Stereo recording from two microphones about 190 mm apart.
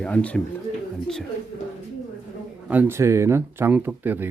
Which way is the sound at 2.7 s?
10° right (ahead or behind).